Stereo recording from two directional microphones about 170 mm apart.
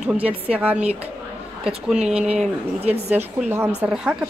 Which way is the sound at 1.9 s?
5° right (ahead or behind).